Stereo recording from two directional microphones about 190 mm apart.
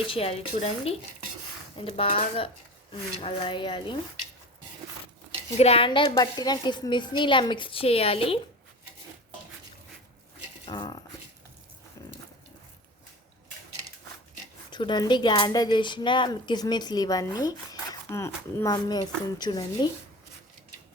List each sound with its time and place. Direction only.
0.1 s a woman's voice: 30° left (ahead or behind)
5.5 s a woman's voice: 30° left (ahead or behind)
10.7 s a woman's voice: 20° left (ahead or behind)
12.0 s dog: 20° left (ahead or behind)
14.7 s a woman's voice: 25° left (ahead or behind)